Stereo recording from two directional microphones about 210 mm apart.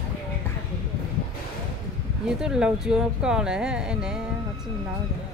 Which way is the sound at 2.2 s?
5° right (ahead or behind).